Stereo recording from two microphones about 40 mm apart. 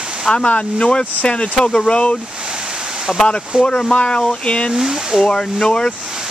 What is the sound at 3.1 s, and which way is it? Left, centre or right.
Speech, centre.